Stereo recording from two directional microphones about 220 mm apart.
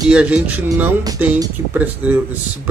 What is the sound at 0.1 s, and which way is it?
Speech, 5° right (ahead or behind).